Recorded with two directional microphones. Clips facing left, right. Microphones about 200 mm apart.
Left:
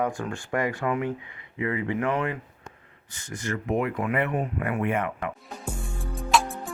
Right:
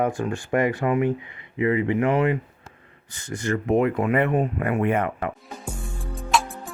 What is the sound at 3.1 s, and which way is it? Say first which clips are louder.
Speech: right 6 dB; 30° right (ahead or behind).